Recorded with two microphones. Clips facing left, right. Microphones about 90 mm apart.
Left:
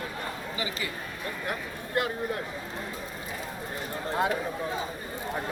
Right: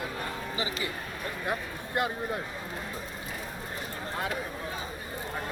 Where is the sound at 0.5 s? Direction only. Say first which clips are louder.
Right 1 dB; 25° right (ahead or behind).